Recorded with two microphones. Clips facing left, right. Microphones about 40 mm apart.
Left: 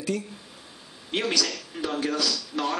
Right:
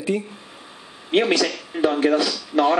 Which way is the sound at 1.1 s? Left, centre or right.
Right.